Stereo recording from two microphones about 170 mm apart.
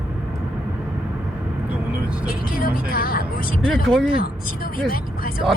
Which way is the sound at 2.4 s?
60° left (ahead or behind).